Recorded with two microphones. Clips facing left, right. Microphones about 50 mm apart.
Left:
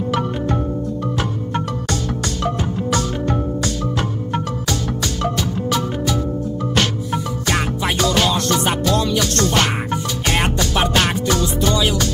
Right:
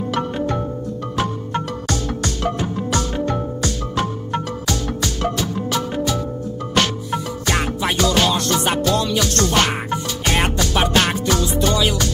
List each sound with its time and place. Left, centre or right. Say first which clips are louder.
1.5 s music: left 1 dB; centre
4.3 s music: left 1 dB; centre
7.1 s music: left 1 dB; centre